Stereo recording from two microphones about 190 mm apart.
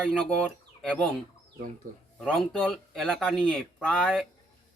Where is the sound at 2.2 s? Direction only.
Centre (ahead or behind).